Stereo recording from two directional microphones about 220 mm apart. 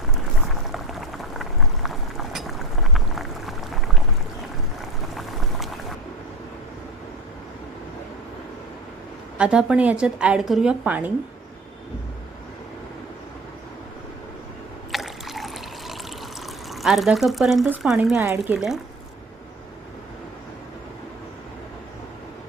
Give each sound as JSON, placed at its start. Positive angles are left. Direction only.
{"t": 0.4, "sound": "boiling", "side_deg": 0}
{"t": 5.1, "sound": "boiling", "side_deg": 0}
{"t": 9.4, "sound": "a woman's voice", "side_deg": -5}
{"t": 14.9, "sound": "trickle", "side_deg": 0}
{"t": 16.7, "sound": "a woman's voice", "side_deg": 0}